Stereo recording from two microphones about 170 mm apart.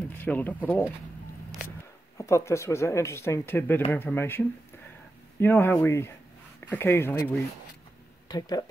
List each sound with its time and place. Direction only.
0.2 s speech: 10° left (ahead or behind)
2.1 s speech: 15° left (ahead or behind)
8.3 s speech: 20° left (ahead or behind)